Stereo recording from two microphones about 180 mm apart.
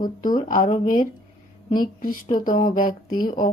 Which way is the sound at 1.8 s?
50° left (ahead or behind).